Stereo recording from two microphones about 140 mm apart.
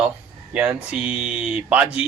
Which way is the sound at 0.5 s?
5° right (ahead or behind).